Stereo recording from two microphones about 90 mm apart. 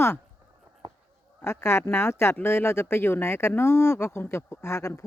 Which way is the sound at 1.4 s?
30° left (ahead or behind).